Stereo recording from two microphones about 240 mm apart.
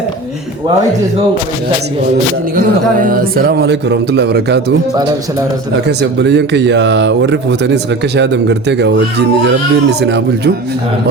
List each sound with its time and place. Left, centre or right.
2.6 s speech: right
6.0 s speech: right
10.0 s speech: right